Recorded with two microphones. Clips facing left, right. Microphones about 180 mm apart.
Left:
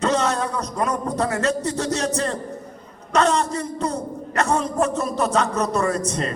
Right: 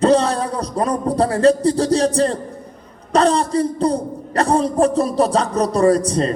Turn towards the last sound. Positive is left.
turn(degrees=-35)  # may be behind; listen again after turning